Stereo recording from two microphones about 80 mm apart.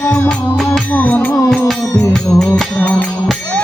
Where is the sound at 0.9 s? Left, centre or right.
Centre.